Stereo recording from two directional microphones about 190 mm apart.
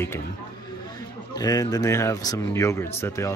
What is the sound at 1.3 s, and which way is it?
Speech, 20° left (ahead or behind).